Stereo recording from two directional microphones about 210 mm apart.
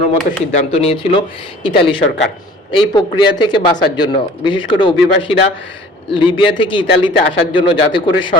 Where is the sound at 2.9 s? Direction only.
20° left (ahead or behind).